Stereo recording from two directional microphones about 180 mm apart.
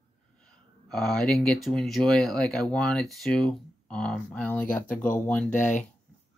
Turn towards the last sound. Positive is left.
turn(degrees=45)  # may be behind; listen again after turning